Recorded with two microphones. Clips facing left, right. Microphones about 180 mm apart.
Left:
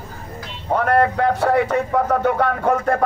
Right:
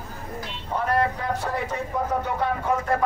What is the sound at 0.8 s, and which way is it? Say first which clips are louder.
Speech: left 7 dB; 65° left (ahead or behind).